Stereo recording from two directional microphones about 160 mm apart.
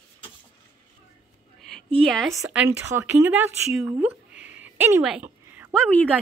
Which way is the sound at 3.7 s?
5° right (ahead or behind).